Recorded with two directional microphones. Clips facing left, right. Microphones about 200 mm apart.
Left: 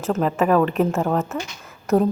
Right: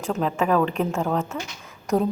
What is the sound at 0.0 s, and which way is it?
A woman's voice, centre (ahead or behind).